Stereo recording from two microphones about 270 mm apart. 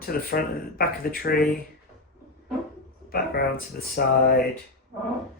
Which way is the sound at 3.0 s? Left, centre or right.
Left.